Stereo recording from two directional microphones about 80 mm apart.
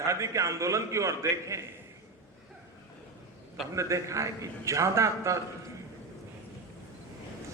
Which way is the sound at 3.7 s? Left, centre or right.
Right.